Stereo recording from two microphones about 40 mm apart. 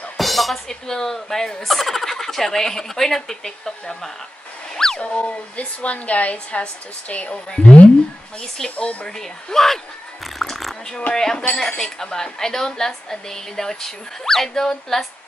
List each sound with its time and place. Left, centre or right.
0.2 s music: centre
0.7 s a woman's voice: centre
4.7 s a sound: centre
5.0 s a woman's voice: left
8.4 s a woman's voice: centre
10.2 s a sound: centre
11.3 s speech: left
11.8 s a woman's voice: centre